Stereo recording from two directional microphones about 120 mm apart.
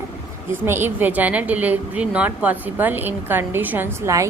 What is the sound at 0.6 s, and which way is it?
A woman's voice, 20° right (ahead or behind).